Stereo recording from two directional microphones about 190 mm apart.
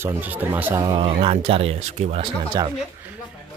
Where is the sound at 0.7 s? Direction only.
25° right (ahead or behind).